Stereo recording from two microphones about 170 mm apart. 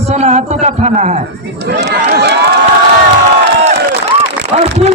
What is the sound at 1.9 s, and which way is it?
Run, 75° right (ahead or behind).